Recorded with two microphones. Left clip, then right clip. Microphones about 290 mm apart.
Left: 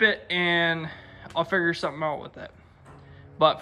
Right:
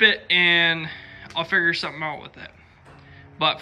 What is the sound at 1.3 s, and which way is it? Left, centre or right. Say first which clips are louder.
Speech: even; centre.